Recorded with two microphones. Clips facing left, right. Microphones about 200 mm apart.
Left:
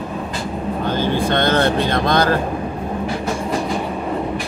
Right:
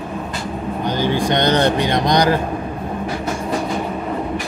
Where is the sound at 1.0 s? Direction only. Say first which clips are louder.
Right 1 dB; 15° right (ahead or behind).